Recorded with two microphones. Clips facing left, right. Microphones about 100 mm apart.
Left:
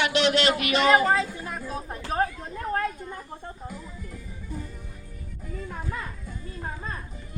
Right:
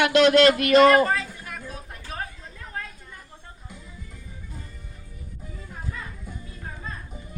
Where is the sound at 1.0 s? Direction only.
25° left (ahead or behind).